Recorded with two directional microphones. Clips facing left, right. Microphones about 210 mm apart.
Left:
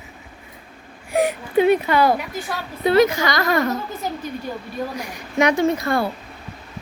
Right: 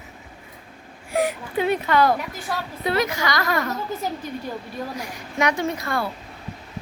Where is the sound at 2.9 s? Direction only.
25° left (ahead or behind).